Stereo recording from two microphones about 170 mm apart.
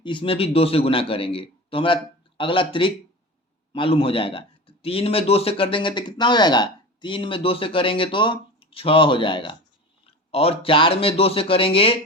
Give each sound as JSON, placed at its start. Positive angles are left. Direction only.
{"t": 0.0, "sound": "a man's voice", "side_deg": 30}